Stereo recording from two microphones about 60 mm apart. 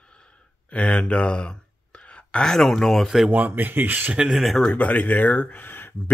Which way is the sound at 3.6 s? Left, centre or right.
Right.